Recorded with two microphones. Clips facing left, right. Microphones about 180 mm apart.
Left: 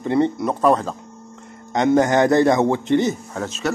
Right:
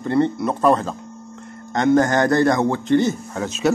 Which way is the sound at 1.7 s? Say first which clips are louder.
Even; 20° left (ahead or behind).